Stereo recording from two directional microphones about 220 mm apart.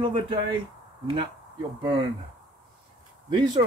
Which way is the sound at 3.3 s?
20° right (ahead or behind).